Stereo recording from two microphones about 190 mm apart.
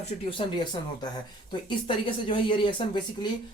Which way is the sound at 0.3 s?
25° left (ahead or behind).